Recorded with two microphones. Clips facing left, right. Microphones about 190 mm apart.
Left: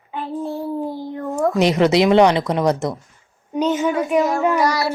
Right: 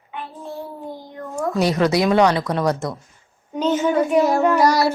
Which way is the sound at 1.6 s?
20° left (ahead or behind).